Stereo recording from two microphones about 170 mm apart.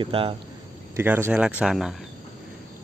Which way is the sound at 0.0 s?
30° right (ahead or behind).